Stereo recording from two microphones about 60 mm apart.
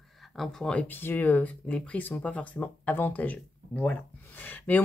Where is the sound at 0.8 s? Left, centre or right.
Left.